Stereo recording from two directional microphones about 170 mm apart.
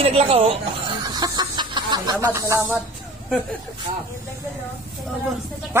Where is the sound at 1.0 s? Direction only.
25° right (ahead or behind).